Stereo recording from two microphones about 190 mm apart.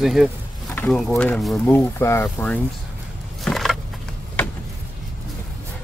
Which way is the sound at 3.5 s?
Centre (ahead or behind).